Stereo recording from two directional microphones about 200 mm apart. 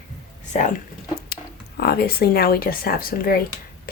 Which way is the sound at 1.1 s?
50° left (ahead or behind).